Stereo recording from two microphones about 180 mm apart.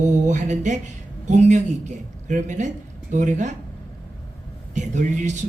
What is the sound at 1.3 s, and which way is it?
Speech, 40° right (ahead or behind).